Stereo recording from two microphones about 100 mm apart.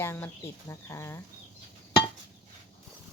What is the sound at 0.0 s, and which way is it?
Speech, 25° left (ahead or behind).